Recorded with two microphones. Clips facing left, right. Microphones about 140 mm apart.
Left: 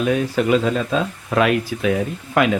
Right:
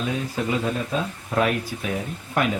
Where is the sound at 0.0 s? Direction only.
70° left (ahead or behind).